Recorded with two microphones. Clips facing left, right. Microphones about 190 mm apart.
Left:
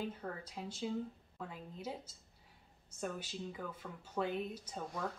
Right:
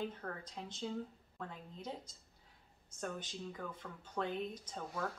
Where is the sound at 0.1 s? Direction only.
10° left (ahead or behind).